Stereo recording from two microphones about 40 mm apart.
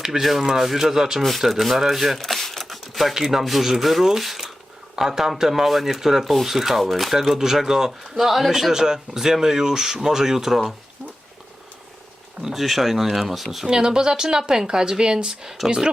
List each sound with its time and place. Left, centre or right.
0.2 s speech: centre
1.2 s speech: centre
3.2 s speech: centre
12.4 s speech: centre
13.7 s speech: centre